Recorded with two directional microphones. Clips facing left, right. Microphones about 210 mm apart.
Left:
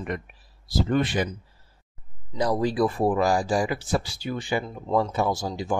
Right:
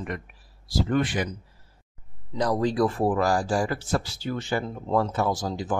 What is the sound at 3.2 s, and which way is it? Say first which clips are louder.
Speech: left 1 dB; 20° left (ahead or behind).